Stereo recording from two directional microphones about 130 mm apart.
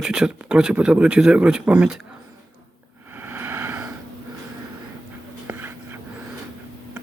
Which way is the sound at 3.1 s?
15° right (ahead or behind).